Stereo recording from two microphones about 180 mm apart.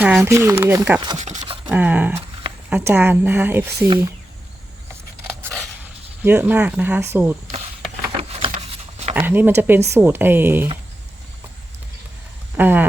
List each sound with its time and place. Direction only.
0.0 s speech: 10° right (ahead or behind)
1.4 s a sound: 25° right (ahead or behind)
1.7 s speech: 10° right (ahead or behind)
6.2 s speech: 10° right (ahead or behind)
8.3 s a sound: 30° right (ahead or behind)
9.1 s speech: 10° right (ahead or behind)
12.5 s speech: 10° right (ahead or behind)